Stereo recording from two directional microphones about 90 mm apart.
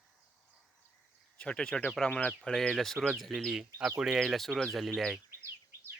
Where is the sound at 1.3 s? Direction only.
10° left (ahead or behind).